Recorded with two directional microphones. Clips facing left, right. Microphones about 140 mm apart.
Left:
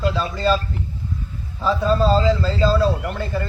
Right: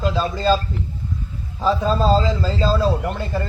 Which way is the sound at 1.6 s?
35° right (ahead or behind).